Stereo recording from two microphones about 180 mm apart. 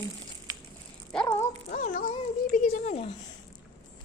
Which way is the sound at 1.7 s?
45° left (ahead or behind).